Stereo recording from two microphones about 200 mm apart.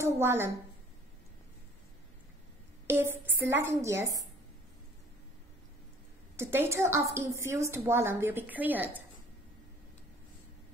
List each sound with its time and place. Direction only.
0.0 s a woman's voice: 10° right (ahead or behind)
2.9 s a woman's voice: 10° right (ahead or behind)
6.3 s a woman's voice: 10° right (ahead or behind)